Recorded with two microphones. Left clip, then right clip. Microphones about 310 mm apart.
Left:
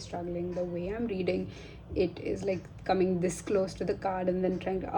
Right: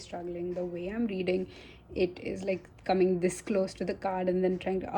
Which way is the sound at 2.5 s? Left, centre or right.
Right.